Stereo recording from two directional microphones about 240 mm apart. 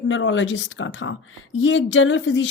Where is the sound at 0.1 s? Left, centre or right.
Left.